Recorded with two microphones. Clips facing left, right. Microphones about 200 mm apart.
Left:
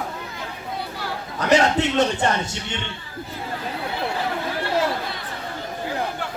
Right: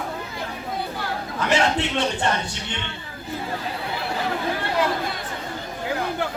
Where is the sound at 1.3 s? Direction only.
40° left (ahead or behind).